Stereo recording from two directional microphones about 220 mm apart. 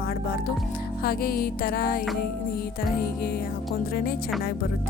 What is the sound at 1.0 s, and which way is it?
Music, 40° left (ahead or behind).